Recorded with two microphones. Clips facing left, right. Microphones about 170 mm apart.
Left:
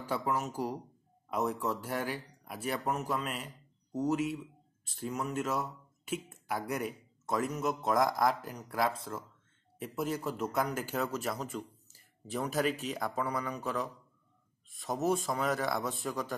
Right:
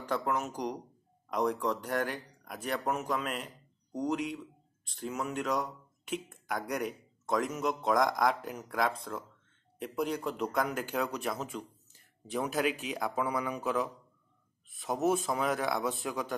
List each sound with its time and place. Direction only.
0.0 s speech: 5° left (ahead or behind)